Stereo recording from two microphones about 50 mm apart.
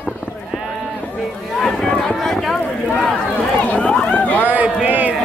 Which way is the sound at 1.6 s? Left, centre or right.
Centre.